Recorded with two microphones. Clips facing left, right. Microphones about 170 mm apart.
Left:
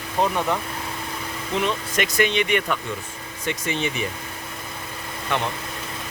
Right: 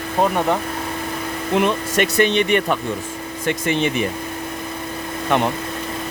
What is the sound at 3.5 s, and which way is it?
Speech, 60° right (ahead or behind).